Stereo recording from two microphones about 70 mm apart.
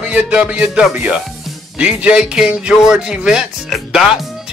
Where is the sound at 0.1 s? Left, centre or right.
Centre.